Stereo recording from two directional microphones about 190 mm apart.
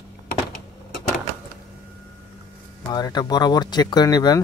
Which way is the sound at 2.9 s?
20° left (ahead or behind).